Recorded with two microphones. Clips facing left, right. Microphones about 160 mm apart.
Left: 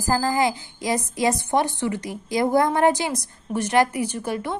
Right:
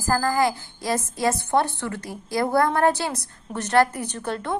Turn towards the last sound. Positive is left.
turn(degrees=10)  # may be behind; listen again after turning